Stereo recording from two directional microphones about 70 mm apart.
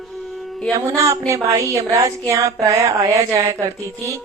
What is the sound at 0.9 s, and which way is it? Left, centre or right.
A woman's voice, right.